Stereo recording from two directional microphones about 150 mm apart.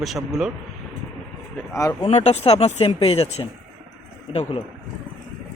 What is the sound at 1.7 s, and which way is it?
Speech, 20° left (ahead or behind).